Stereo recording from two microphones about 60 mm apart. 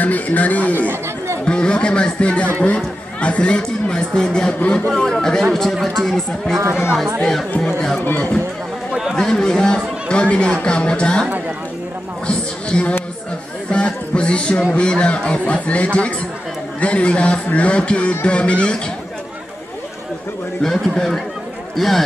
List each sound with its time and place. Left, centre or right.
0.0 s a man's voice: left
1.0 s chatter: right
1.4 s speech: centre
8.0 s speech: left
9.1 s speech: centre
12.3 s a man's voice: centre
20.6 s speech: centre